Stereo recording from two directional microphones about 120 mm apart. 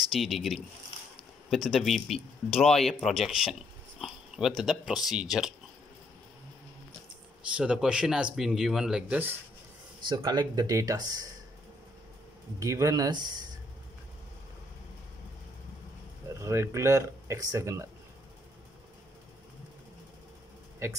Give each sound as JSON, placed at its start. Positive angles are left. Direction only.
{"t": 0.1, "sound": "speech", "side_deg": 0}
{"t": 7.5, "sound": "speech", "side_deg": -5}
{"t": 10.0, "sound": "speech", "side_deg": -40}
{"t": 12.5, "sound": "speech", "side_deg": -25}
{"t": 16.3, "sound": "speech", "side_deg": -25}
{"t": 20.8, "sound": "speech", "side_deg": -20}